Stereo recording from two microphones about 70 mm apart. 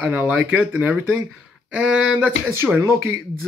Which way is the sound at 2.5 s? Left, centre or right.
Right.